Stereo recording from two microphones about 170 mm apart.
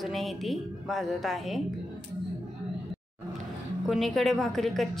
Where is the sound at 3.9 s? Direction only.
Centre (ahead or behind).